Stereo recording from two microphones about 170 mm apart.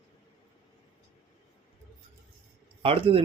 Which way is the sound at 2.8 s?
35° right (ahead or behind).